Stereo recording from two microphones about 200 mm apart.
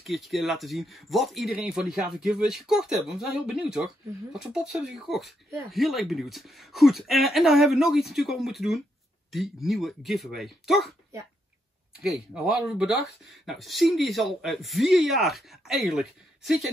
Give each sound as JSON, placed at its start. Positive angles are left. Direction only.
{"t": 0.0, "sound": "speech", "side_deg": 0}
{"t": 12.0, "sound": "speech", "side_deg": 0}